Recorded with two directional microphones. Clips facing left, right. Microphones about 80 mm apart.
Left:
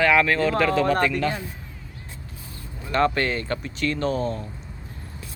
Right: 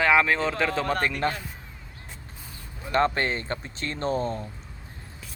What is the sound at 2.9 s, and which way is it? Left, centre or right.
Speech, right.